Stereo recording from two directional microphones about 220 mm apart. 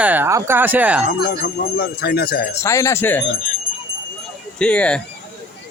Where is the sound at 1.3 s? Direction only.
45° left (ahead or behind).